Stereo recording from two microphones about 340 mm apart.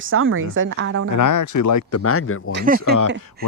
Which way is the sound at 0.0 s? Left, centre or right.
Right.